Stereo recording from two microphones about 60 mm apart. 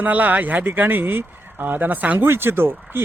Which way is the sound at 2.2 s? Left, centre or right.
Right.